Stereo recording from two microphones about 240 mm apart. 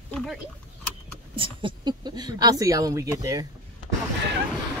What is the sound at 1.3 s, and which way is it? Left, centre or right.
Speech, right.